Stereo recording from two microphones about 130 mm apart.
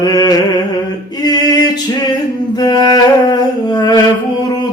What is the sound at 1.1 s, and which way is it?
Male singing, 30° left (ahead or behind).